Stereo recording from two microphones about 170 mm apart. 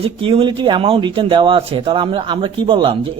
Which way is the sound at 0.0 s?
30° right (ahead or behind).